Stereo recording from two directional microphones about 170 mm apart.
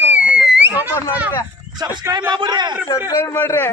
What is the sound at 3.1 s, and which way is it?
Speech, 20° left (ahead or behind).